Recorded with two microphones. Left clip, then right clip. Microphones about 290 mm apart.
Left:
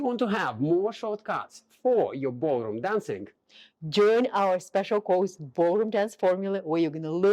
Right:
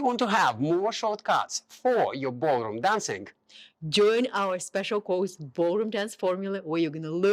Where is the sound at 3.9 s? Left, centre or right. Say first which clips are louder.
Left 1 dB; centre.